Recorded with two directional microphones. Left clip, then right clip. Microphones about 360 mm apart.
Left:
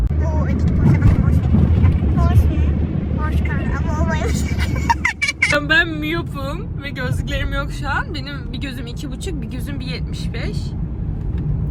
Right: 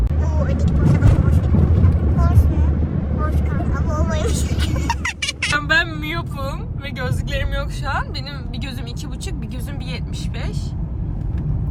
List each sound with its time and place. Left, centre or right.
0.3 s vehicle: centre
7.0 s speech: centre